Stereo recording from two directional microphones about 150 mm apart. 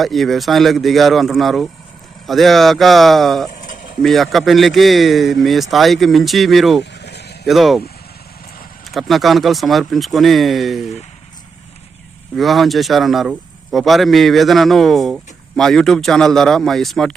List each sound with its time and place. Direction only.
0.0 s speech: centre (ahead or behind)
7.0 s vehicle: 90° left
7.4 s speech: centre (ahead or behind)
8.9 s speech: centre (ahead or behind)
12.4 s speech: centre (ahead or behind)